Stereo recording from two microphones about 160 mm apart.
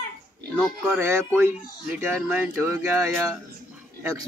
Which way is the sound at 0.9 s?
15° right (ahead or behind).